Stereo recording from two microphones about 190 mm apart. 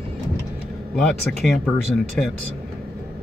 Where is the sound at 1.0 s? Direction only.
Centre (ahead or behind).